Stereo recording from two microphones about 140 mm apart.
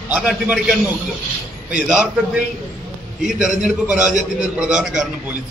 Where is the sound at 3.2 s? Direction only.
5° right (ahead or behind).